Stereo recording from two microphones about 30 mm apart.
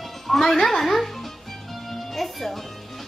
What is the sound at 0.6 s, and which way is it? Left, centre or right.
Speech, centre.